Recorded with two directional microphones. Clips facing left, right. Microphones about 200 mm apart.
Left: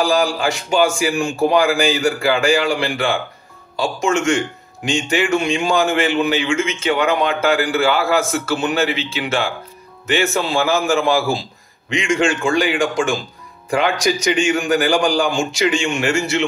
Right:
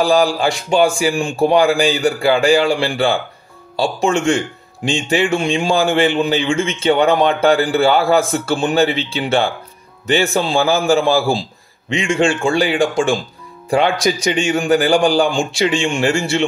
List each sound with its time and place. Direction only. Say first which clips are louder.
0.1 s a man's voice: right 3 dB; 35° right (ahead or behind)